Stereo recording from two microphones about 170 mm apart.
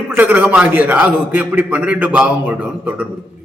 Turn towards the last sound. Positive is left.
turn(degrees=-10)  # may be behind; listen again after turning